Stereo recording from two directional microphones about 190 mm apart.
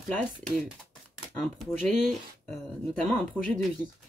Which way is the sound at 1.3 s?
10° left (ahead or behind).